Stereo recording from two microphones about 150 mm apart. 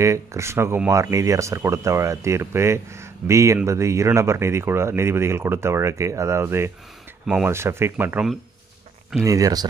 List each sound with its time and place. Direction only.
0.0 s speech: 20° right (ahead or behind)
7.2 s speech: 5° right (ahead or behind)
7.5 s speech: 15° right (ahead or behind)